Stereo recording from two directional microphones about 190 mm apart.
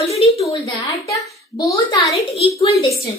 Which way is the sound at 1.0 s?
15° left (ahead or behind).